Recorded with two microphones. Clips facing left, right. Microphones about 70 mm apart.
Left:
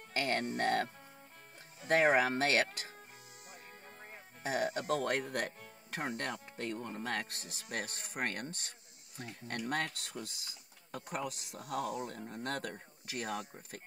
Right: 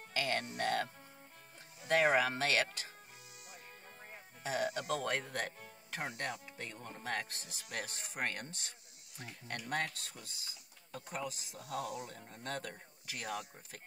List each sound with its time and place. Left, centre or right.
0.1 s speech: left
4.4 s speech: left
5.1 s speech: left
5.9 s speech: left
11.6 s speech: left
12.3 s speech: left
12.7 s speech: left